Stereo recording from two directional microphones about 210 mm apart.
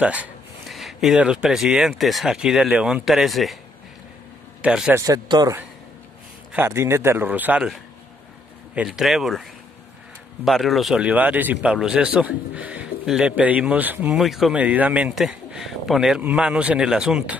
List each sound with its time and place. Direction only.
0.0 s speech: 5° right (ahead or behind)
4.6 s a man's voice: 5° right (ahead or behind)
5.0 s speech: 15° right (ahead or behind)